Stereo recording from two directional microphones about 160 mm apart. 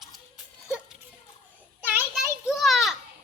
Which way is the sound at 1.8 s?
10° right (ahead or behind).